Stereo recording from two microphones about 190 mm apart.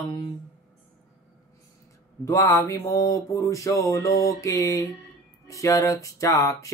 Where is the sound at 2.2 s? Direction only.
15° left (ahead or behind).